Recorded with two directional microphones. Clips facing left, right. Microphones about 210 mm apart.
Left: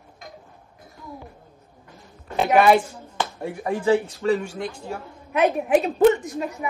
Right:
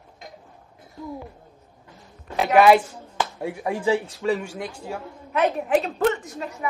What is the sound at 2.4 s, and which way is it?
Speech, 5° right (ahead or behind).